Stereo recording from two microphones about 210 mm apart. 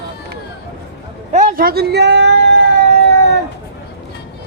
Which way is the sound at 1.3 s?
40° right (ahead or behind).